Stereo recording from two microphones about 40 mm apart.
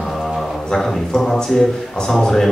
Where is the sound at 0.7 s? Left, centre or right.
Centre.